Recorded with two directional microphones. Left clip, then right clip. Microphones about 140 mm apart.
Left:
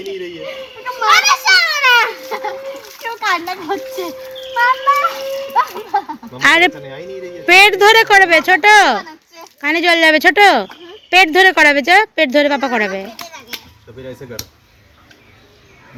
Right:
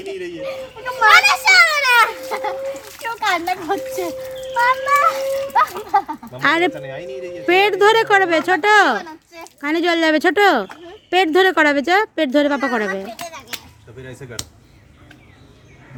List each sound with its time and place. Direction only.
1.0 s children playing: 30° right (ahead or behind)
2.3 s chicken: 15° left (ahead or behind)
3.2 s a child's voice: 10° left (ahead or behind)
5.7 s a sound: 10° left (ahead or behind)
6.1 s a sound: 15° right (ahead or behind)
7.4 s speech: 15° right (ahead or behind)